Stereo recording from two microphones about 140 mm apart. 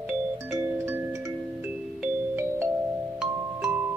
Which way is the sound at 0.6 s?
20° right (ahead or behind).